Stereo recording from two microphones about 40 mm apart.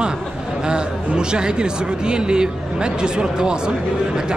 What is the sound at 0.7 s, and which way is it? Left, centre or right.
A man's voice, right.